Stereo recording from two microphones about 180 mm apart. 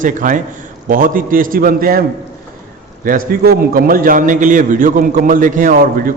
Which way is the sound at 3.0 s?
50° right (ahead or behind).